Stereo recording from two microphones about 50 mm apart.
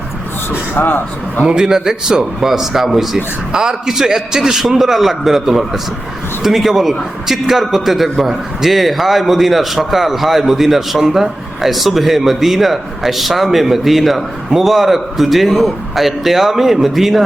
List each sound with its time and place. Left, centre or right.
0.7 s speech: left
1.5 s a man's voice: centre